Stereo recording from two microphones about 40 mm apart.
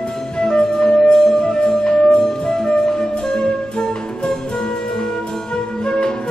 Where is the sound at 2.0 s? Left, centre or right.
Centre.